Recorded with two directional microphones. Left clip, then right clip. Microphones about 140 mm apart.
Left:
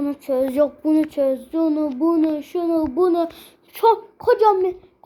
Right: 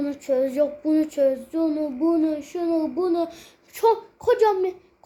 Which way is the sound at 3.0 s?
50° left (ahead or behind).